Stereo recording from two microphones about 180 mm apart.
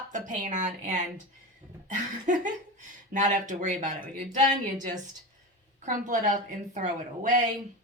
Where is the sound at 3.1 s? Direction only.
45° right (ahead or behind).